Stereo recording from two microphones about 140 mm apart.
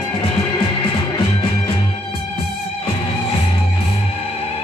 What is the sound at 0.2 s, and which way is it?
Music, 40° left (ahead or behind).